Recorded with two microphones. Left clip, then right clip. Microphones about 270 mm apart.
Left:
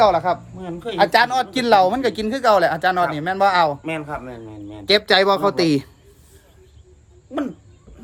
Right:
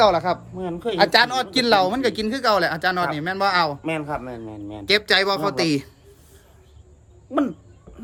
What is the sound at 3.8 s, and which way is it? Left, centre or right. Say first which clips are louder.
A man's voice: right 1 dB; centre.